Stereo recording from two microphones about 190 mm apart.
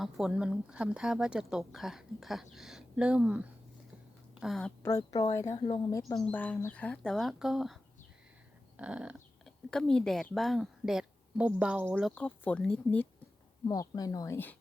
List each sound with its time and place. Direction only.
0.0 s speech: 5° right (ahead or behind)
4.8 s speech: 15° left (ahead or behind); by 7.8 s centre (ahead or behind)
8.8 s dog: 5° right (ahead or behind)
9.6 s speech: 5° left (ahead or behind)
12.1 s speech: 5° left (ahead or behind)
13.7 s speech: 20° left (ahead or behind)